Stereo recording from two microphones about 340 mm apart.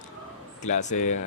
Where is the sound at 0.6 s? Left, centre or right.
Left.